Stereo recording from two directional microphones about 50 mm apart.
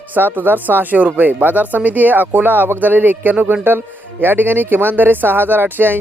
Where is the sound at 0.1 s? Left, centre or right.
Right.